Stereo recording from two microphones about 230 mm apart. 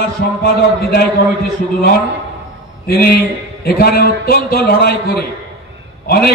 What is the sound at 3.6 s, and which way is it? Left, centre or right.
A man's voice, left.